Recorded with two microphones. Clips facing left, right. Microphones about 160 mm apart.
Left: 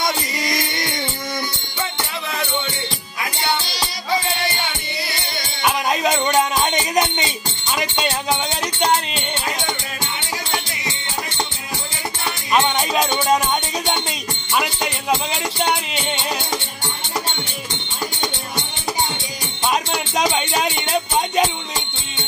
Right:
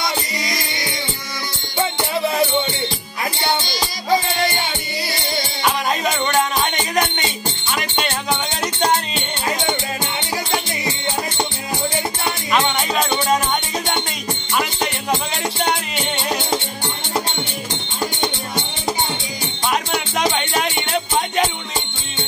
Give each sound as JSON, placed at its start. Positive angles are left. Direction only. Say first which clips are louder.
{"t": 5.6, "sound": "music", "louder": "left 2 dB", "side_deg": 15}
{"t": 19.7, "sound": "music", "louder": "even", "side_deg": 15}